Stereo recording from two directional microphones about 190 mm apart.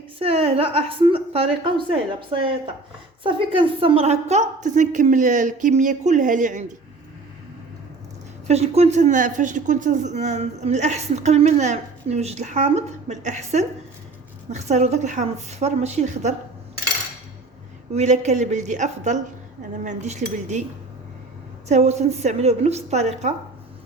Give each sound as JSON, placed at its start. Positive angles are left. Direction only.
{"t": 0.2, "sound": "a woman's voice", "side_deg": -30}
{"t": 8.4, "sound": "speech", "side_deg": -35}
{"t": 17.9, "sound": "speech", "side_deg": -35}
{"t": 21.7, "sound": "speech", "side_deg": -35}